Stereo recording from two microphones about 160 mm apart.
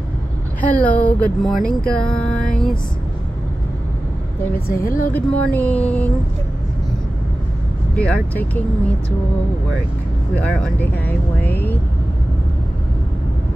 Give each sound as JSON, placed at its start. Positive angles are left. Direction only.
{"t": 0.7, "sound": "speech", "side_deg": 10}
{"t": 1.7, "sound": "a sound", "side_deg": 5}
{"t": 4.8, "sound": "speech", "side_deg": 60}
{"t": 5.1, "sound": "speech", "side_deg": 10}
{"t": 7.9, "sound": "speech", "side_deg": 5}
{"t": 10.3, "sound": "speech", "side_deg": 10}